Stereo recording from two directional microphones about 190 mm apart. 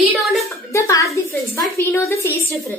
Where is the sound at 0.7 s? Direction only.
15° left (ahead or behind).